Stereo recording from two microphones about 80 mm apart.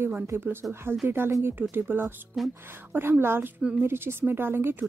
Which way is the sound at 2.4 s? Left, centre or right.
Centre.